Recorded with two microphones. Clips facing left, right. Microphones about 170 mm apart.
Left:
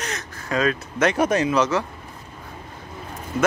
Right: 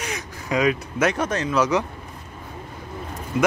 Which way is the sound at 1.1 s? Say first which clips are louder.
Left 5 dB; 10° left (ahead or behind).